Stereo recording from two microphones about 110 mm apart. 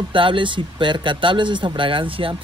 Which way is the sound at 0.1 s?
50° right (ahead or behind).